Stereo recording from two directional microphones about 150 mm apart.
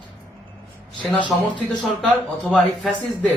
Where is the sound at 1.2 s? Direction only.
Centre (ahead or behind).